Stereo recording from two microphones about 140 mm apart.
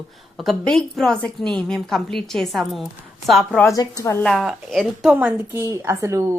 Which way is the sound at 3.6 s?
25° left (ahead or behind).